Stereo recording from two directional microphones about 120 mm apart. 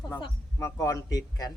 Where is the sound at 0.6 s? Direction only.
25° left (ahead or behind).